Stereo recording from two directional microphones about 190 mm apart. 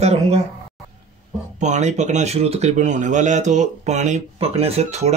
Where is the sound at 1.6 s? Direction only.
40° right (ahead or behind).